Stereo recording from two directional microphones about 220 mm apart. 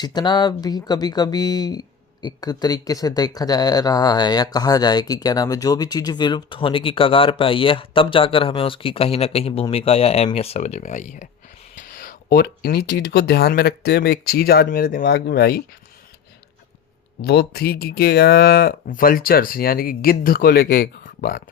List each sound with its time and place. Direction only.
0.0 s speech: 20° left (ahead or behind); by 15.6 s 45° left (ahead or behind)
17.2 s speech: 45° left (ahead or behind)